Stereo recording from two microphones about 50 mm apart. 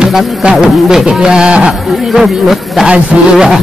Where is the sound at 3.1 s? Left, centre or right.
Right.